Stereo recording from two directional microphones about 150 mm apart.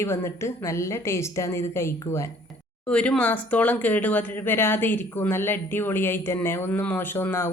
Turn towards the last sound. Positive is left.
turn(degrees=15)  # may be behind; listen again after turning